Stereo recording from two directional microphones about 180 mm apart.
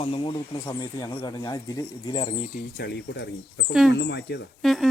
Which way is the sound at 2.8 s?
65° left (ahead or behind).